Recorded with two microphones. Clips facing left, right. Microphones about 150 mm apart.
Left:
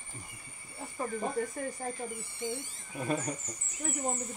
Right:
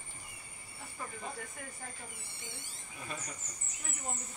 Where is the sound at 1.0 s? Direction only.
40° left (ahead or behind).